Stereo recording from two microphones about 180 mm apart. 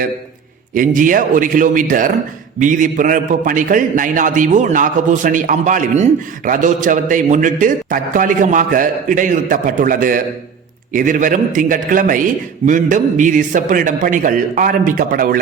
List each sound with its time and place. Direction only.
0.7 s a man's voice: 50° right (ahead or behind)